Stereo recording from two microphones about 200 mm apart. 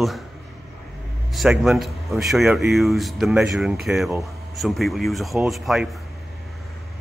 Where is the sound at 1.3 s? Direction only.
Centre (ahead or behind).